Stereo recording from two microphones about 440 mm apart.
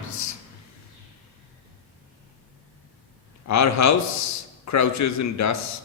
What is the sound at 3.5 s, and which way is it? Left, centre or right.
A man's voice, left.